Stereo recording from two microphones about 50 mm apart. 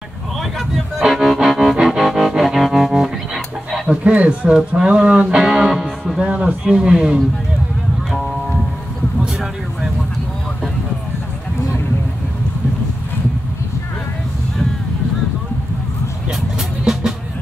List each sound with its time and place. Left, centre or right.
0.4 s music: centre
4.0 s speech: right
5.3 s music: centre
6.1 s a man's voice: right
16.3 s music: centre